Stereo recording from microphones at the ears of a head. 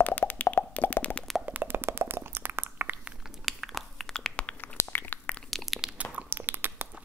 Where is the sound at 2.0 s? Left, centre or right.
Right.